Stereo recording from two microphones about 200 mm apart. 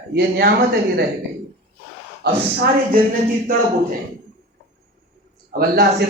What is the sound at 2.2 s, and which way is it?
Speech, 55° right (ahead or behind).